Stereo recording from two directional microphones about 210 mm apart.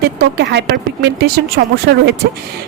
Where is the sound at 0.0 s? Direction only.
50° right (ahead or behind).